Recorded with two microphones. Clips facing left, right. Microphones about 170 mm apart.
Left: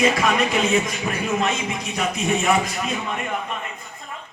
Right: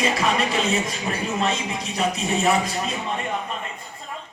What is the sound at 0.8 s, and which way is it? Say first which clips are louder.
A man's voice: left 1 dB; 30° right (ahead or behind).